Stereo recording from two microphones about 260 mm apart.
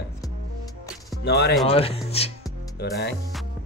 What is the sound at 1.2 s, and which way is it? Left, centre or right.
Speech, left.